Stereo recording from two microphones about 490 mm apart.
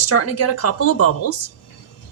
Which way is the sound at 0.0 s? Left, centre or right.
Left.